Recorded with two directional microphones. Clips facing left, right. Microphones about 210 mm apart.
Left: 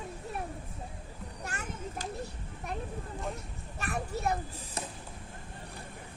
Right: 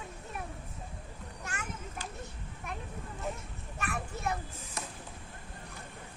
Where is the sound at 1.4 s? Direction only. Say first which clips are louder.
Left 2 dB; 35° left (ahead or behind).